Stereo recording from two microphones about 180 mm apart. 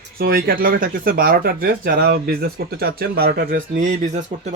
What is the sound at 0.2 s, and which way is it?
Speech, 55° right (ahead or behind).